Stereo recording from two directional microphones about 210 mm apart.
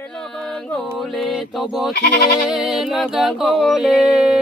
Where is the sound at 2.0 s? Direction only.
50° left (ahead or behind).